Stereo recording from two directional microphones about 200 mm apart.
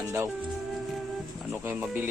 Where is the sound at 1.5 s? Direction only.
10° right (ahead or behind).